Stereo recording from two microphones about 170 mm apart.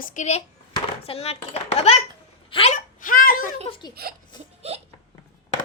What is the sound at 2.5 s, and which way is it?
Hiccup, 30° left (ahead or behind).